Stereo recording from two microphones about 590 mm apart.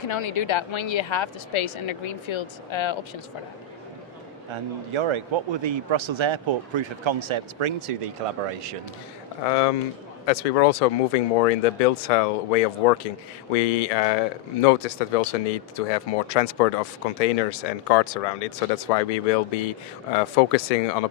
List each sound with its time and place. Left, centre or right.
0.1 s a woman's voice: left
4.5 s a man's voice: right
9.5 s speech: left